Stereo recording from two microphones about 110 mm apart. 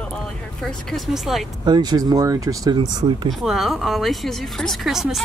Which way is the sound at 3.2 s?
Centre (ahead or behind).